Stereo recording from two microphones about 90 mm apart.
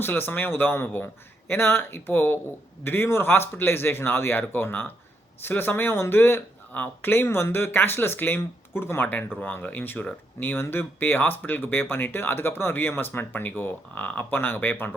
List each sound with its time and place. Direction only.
0.0 s speech: 25° left (ahead or behind)